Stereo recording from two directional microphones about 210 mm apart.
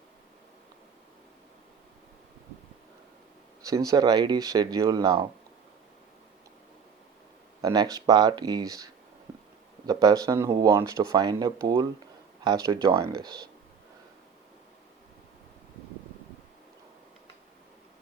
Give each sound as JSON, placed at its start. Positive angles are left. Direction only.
{"t": 3.6, "sound": "speech", "side_deg": -15}
{"t": 7.6, "sound": "speech", "side_deg": -20}